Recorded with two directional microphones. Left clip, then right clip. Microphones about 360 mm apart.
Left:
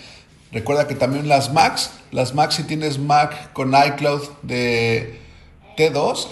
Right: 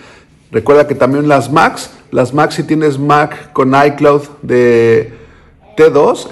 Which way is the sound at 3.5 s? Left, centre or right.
Right.